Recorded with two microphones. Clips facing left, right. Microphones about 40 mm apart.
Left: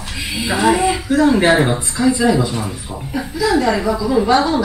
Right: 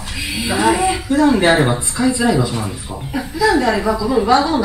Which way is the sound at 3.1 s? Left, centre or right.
Right.